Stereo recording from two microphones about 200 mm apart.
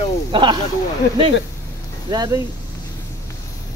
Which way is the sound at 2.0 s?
20° right (ahead or behind).